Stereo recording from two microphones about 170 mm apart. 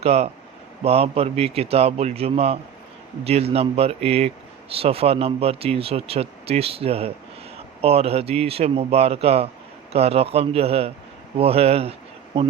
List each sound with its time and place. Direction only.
0.0 s speech: 40° right (ahead or behind)